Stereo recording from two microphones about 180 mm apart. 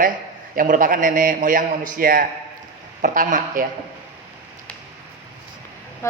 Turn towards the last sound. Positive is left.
turn(degrees=15)  # may be behind; listen again after turning